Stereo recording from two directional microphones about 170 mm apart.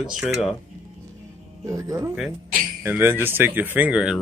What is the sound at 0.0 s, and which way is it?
Speech, 5° right (ahead or behind).